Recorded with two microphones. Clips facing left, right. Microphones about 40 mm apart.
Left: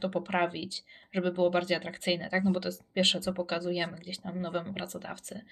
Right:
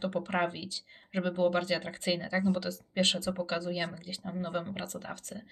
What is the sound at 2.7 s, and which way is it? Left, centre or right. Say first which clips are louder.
Speech: left 1 dB; left.